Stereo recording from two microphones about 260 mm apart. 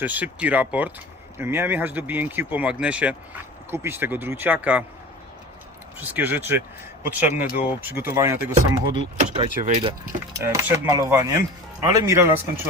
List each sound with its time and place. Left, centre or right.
0.0 s speech: centre
6.0 s speech: centre
9.1 s speech: right
10.3 s speech: centre